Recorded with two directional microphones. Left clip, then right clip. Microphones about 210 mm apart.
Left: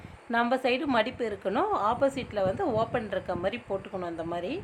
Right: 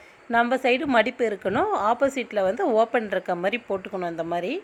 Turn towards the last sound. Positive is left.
turn(degrees=-20)  # may be behind; listen again after turning